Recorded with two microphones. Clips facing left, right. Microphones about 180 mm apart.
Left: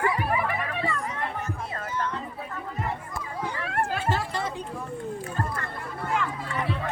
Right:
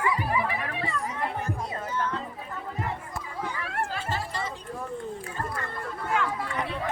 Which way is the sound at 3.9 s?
55° left (ahead or behind).